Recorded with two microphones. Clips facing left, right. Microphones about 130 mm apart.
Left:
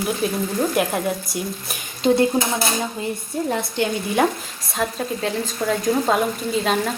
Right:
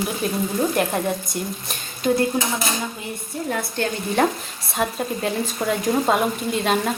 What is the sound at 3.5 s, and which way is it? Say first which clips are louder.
Speech: left 1 dB; 20° left (ahead or behind).